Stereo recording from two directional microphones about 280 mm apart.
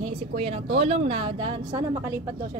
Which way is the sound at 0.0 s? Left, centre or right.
Right.